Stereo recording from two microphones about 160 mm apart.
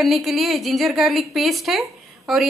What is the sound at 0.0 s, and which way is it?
A woman's voice, centre (ahead or behind).